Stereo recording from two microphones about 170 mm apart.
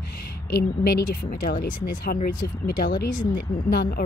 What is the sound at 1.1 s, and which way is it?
Speech, 55° left (ahead or behind).